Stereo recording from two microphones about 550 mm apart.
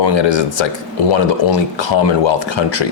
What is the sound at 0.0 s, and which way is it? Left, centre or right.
Speech, left.